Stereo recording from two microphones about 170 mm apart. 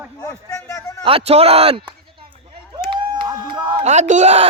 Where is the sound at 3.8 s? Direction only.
45° right (ahead or behind).